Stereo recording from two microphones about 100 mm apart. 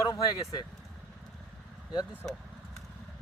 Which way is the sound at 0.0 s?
40° left (ahead or behind).